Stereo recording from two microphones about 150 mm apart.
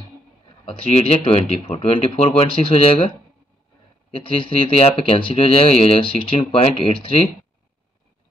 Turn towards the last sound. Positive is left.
turn(degrees=35)  # may be behind; listen again after turning